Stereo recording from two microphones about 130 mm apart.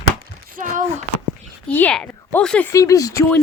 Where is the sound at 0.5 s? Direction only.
90° right.